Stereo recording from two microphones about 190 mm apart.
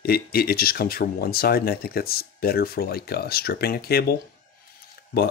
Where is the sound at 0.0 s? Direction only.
55° left (ahead or behind).